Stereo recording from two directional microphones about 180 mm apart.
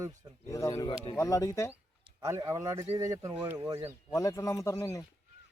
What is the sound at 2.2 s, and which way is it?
Speech, 15° right (ahead or behind).